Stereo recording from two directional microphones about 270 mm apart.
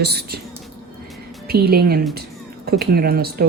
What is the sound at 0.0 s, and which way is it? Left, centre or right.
Speech, right.